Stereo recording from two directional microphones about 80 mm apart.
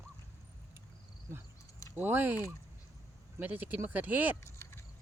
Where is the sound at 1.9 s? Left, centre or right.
Right.